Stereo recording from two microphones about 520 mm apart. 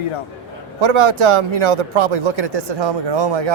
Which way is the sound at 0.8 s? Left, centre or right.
Right.